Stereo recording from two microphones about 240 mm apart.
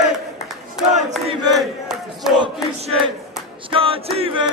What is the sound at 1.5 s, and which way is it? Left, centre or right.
Battle cry, centre.